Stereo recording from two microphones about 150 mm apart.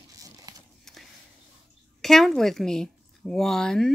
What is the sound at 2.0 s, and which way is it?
A woman's voice, centre (ahead or behind).